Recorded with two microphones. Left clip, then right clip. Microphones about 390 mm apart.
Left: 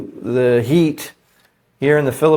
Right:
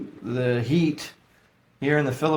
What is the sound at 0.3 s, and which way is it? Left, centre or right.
Speech, left.